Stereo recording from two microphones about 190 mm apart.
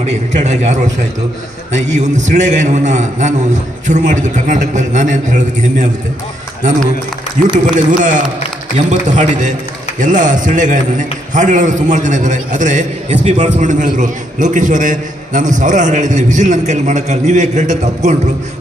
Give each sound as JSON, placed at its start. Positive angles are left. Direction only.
{"t": 0.0, "sound": "a man's voice", "side_deg": -35}
{"t": 7.7, "sound": "a man's voice", "side_deg": -40}